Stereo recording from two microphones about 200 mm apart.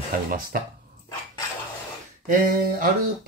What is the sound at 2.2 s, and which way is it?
Speech, 45° right (ahead or behind).